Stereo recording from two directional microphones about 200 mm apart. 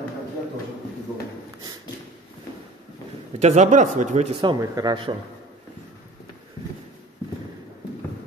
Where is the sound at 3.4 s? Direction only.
35° right (ahead or behind).